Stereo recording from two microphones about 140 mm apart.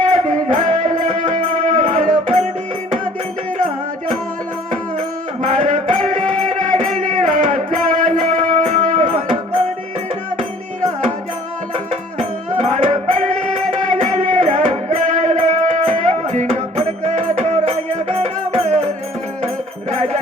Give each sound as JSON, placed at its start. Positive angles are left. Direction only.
{"t": 0.0, "sound": "music", "side_deg": -65}
{"t": 5.4, "sound": "music", "side_deg": -65}
{"t": 12.5, "sound": "music", "side_deg": -60}